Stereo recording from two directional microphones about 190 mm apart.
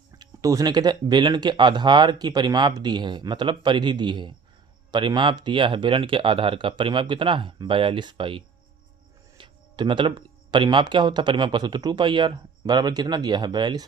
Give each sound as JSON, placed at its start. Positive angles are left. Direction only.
{"t": 0.2, "sound": "speech", "side_deg": -20}